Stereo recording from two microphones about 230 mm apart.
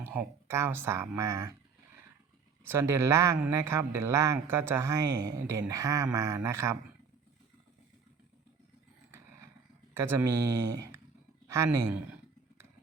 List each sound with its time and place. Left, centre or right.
0.0 s speech: centre
2.6 s speech: centre
9.9 s speech: centre
11.4 s speech: centre